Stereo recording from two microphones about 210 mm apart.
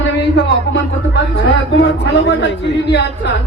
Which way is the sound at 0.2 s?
55° left (ahead or behind).